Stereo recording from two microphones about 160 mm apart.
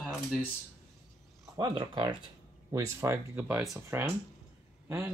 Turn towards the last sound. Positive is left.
turn(degrees=-15)  # may be behind; listen again after turning